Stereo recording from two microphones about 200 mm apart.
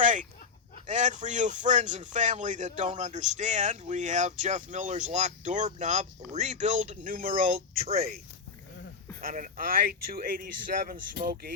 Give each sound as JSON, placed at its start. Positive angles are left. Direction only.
{"t": 0.0, "sound": "a sound", "side_deg": -40}
{"t": 0.9, "sound": "speech", "side_deg": -35}
{"t": 9.2, "sound": "speech", "side_deg": -45}